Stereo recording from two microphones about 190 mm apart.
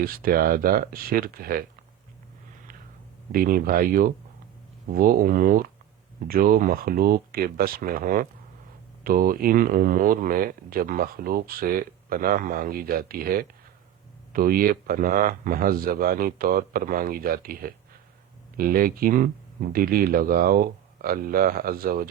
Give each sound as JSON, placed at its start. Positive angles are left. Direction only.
{"t": 0.0, "sound": "speech", "side_deg": -50}
{"t": 3.3, "sound": "speech", "side_deg": -45}